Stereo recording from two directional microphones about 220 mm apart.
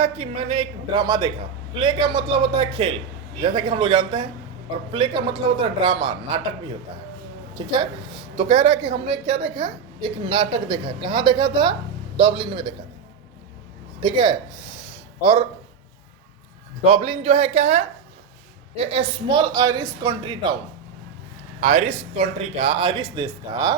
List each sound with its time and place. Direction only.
0.0 s a woman's voice: 25° right (ahead or behind)
8.4 s a woman's voice: 25° right (ahead or behind)
14.0 s a woman's voice: 20° right (ahead or behind)
16.8 s a woman's voice: 25° right (ahead or behind)
21.6 s a woman's voice: 30° right (ahead or behind)